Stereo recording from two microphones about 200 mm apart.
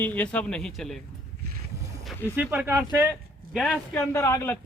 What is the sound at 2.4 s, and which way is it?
Speech, 10° right (ahead or behind).